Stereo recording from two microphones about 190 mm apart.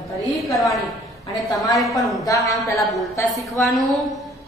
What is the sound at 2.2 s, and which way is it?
A woman's voice, 20° left (ahead or behind).